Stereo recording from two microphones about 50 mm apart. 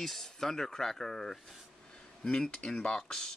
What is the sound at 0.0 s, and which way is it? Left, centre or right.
Speech, centre.